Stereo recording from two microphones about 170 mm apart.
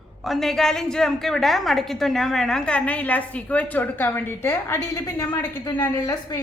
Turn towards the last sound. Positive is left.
turn(degrees=20)  # may be behind; listen again after turning